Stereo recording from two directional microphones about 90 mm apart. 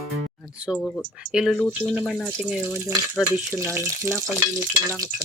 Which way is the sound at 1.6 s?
15° left (ahead or behind).